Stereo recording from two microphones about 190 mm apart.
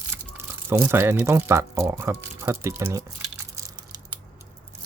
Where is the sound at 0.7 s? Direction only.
15° right (ahead or behind).